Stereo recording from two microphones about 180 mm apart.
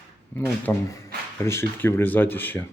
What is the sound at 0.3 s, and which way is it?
Speech, 10° left (ahead or behind).